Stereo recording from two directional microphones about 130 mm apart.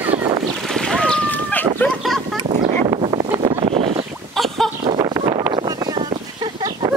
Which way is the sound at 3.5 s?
50° right (ahead or behind).